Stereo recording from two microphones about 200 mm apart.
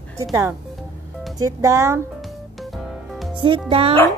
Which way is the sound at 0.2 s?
15° right (ahead or behind).